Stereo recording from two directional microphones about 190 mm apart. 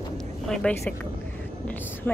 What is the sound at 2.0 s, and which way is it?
Speech, 10° left (ahead or behind).